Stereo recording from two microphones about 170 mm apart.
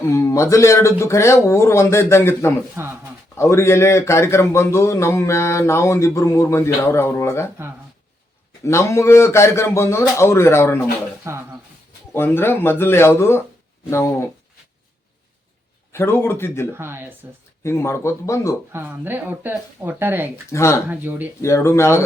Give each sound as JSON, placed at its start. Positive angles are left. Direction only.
{"t": 0.1, "sound": "a man's voice", "side_deg": 15}
{"t": 2.7, "sound": "a sound", "side_deg": -15}
{"t": 3.3, "sound": "a man's voice", "side_deg": 15}
{"t": 8.6, "sound": "a man's voice", "side_deg": 15}
{"t": 11.3, "sound": "speech", "side_deg": -15}
{"t": 12.1, "sound": "a man's voice", "side_deg": 15}
{"t": 15.9, "sound": "a man's voice", "side_deg": 15}
{"t": 16.7, "sound": "speech", "side_deg": -15}
{"t": 17.6, "sound": "a man's voice", "side_deg": 15}
{"t": 18.7, "sound": "speech", "side_deg": -10}
{"t": 20.5, "sound": "a man's voice", "side_deg": 15}
{"t": 20.9, "sound": "speech", "side_deg": -10}
{"t": 21.4, "sound": "a man's voice", "side_deg": 15}